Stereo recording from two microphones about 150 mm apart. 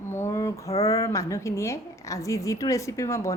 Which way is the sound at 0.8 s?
20° left (ahead or behind).